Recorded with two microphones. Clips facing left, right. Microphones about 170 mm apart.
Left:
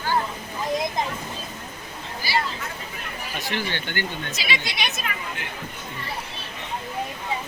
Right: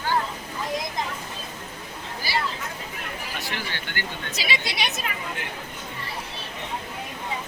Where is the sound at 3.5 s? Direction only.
20° left (ahead or behind).